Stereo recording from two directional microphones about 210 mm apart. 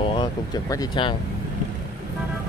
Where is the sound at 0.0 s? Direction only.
20° left (ahead or behind).